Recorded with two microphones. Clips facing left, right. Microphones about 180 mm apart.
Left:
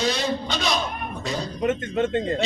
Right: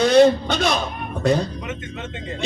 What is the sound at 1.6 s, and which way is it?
Speech, 50° left (ahead or behind).